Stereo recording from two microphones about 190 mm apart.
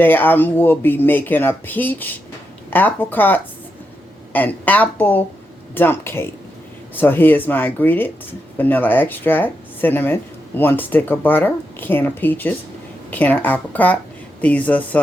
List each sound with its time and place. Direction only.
0.0 s speech: 10° left (ahead or behind)